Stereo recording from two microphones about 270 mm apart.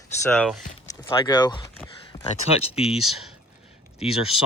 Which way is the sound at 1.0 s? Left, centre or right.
Centre.